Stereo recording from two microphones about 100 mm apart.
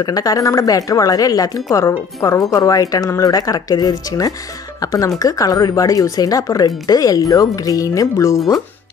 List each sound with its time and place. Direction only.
0.0 s a woman's voice: 40° left (ahead or behind)